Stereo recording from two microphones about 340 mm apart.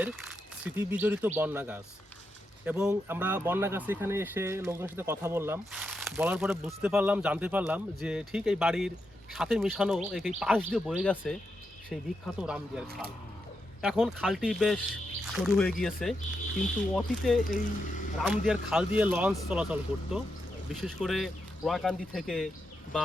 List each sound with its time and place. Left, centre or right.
0.0 s speech: centre
12.4 s speech: centre
13.8 s speech: centre
17.4 s speech: left
18.2 s speech: centre